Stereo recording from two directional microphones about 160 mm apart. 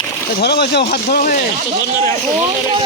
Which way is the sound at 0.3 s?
90° left.